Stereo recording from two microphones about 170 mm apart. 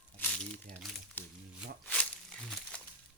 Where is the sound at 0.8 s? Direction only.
Centre (ahead or behind).